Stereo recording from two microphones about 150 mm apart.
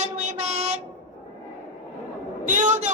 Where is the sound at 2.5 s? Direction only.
55° right (ahead or behind).